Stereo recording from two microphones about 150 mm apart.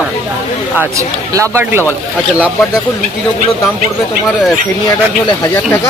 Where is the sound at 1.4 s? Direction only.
15° right (ahead or behind).